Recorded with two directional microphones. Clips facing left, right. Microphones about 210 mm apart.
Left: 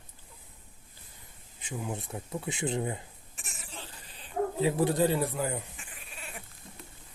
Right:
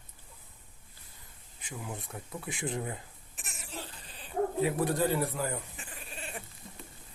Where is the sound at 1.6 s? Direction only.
25° left (ahead or behind).